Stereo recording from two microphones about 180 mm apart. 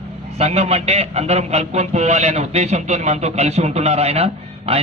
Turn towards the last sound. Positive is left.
turn(degrees=-35)  # may be behind; listen again after turning